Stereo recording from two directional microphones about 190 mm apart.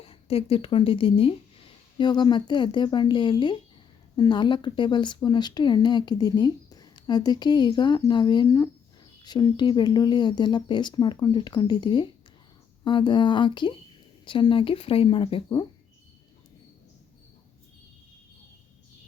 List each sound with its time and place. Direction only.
0.0 s speech: 30° left (ahead or behind)